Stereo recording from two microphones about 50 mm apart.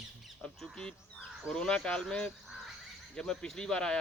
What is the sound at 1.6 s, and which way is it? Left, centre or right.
Speech, centre.